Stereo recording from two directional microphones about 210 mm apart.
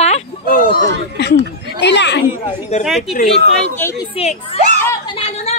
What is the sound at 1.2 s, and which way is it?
Speech, 55° left (ahead or behind).